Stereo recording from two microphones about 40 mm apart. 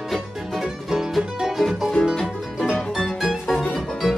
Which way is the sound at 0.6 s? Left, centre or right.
Centre.